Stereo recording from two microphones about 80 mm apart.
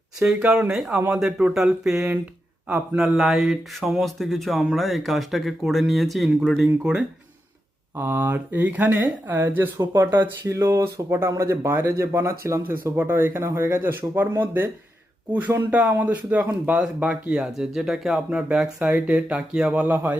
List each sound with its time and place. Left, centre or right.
0.2 s speech: centre
2.6 s speech: right
3.0 s speech: centre
7.9 s speech: right
10.4 s speech: right